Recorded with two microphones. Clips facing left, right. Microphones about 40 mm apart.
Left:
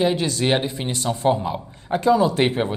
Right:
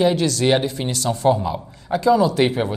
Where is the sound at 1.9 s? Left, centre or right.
Left.